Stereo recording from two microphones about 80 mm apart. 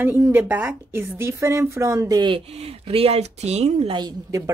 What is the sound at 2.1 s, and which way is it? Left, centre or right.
Speech, right.